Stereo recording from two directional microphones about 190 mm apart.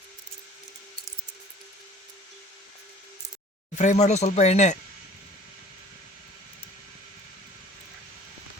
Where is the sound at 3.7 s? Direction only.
40° left (ahead or behind).